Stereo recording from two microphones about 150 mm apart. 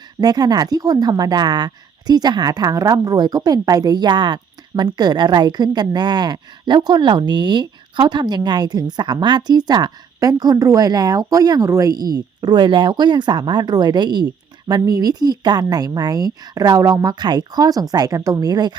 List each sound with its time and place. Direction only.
0.2 s speech: 25° right (ahead or behind)